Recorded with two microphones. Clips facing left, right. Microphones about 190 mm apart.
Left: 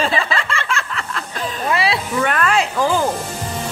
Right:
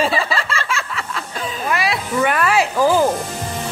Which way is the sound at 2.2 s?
10° right (ahead or behind).